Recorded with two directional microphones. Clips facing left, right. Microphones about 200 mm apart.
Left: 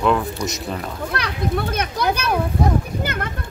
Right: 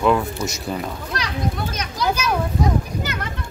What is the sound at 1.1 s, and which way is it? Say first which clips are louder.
A child's voice: left 3 dB; 60° left (ahead or behind).